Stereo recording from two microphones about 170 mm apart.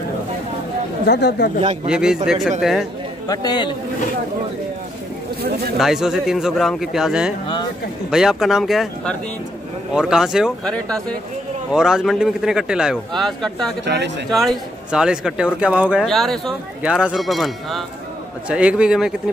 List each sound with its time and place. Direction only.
1.0 s speech: 80° left
1.9 s speech: 5° right (ahead or behind)
3.3 s a man's voice: 25° left (ahead or behind)
5.4 s speech: 65° right (ahead or behind)
5.8 s speech: centre (ahead or behind)
13.8 s speech: 90° right
14.3 s a man's voice: centre (ahead or behind)